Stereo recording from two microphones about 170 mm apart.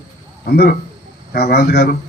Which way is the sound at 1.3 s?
70° left (ahead or behind).